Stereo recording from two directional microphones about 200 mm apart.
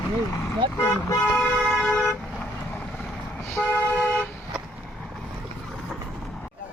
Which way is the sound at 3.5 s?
10° left (ahead or behind).